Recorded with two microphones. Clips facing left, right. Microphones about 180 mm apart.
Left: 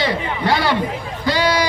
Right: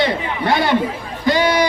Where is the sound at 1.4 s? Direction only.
55° right (ahead or behind).